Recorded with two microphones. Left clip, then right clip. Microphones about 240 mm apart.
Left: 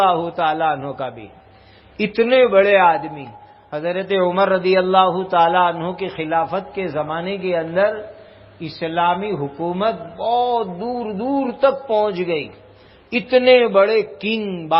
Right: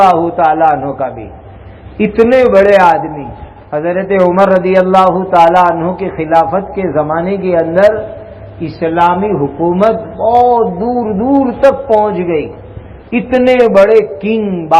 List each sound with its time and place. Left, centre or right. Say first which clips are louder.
0.0 s a man's voice: right 9 dB; left